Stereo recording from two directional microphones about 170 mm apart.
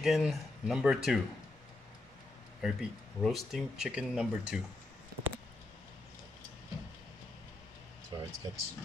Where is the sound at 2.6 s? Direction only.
Centre (ahead or behind).